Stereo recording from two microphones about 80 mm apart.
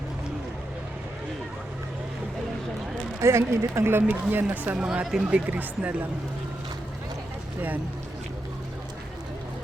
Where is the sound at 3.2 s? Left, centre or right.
Right.